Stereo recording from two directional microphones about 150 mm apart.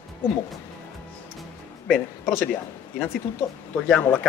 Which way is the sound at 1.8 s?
5° left (ahead or behind).